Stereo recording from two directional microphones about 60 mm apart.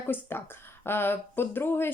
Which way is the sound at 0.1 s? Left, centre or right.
Left.